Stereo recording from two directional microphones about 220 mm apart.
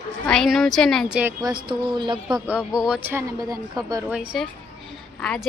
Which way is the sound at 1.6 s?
20° right (ahead or behind).